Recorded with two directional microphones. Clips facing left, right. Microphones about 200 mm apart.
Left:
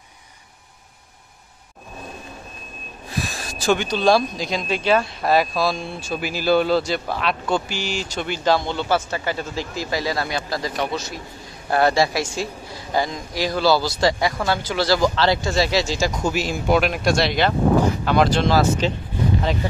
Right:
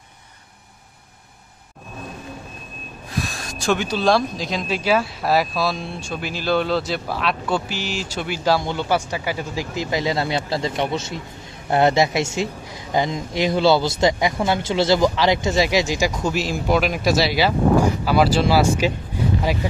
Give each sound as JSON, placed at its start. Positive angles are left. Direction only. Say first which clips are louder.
{"t": 3.2, "sound": "speech", "louder": "right 1 dB", "side_deg": 0}
{"t": 16.2, "sound": "speech", "louder": "even", "side_deg": 0}